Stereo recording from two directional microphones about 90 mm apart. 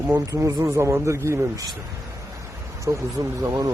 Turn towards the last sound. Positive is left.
turn(degrees=-35)  # may be behind; listen again after turning